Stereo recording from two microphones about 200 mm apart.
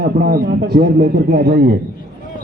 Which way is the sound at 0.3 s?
50° right (ahead or behind).